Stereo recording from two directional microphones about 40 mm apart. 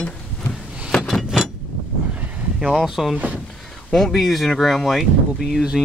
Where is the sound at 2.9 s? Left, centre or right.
Centre.